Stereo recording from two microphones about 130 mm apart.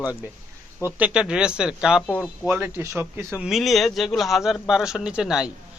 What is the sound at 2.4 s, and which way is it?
Speech, 15° right (ahead or behind).